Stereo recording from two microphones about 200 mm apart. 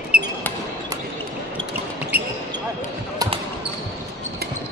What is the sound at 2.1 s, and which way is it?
Basketball bounce, 10° right (ahead or behind).